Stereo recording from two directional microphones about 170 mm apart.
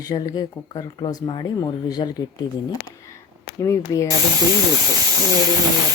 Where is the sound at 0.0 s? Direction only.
20° left (ahead or behind).